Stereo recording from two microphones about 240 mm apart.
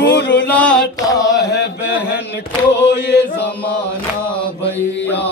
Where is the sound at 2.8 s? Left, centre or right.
Left.